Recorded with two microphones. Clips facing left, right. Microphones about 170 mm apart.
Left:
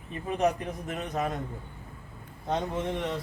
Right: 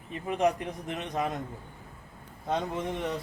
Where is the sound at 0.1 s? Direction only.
20° right (ahead or behind).